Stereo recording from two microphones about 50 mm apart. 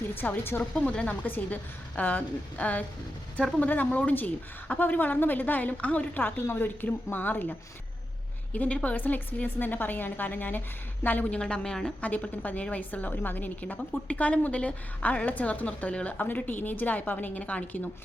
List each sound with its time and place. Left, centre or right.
0.1 s a woman's voice: left
0.7 s a woman's voice: left
8.5 s a woman's voice: left
11.3 s a woman's voice: centre
11.9 s a woman's voice: left
16.1 s a woman's voice: left